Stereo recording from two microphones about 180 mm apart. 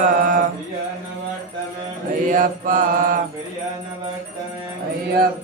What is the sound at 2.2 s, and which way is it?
Mantra, 45° right (ahead or behind).